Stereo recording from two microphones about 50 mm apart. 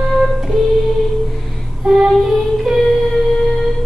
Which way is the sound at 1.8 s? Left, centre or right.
Centre.